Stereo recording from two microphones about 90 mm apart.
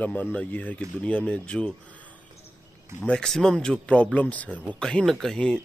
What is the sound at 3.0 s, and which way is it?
Speech, 10° left (ahead or behind).